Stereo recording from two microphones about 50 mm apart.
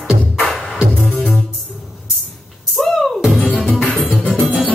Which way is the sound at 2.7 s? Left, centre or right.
Centre.